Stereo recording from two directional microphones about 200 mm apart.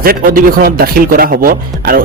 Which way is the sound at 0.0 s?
50° right (ahead or behind).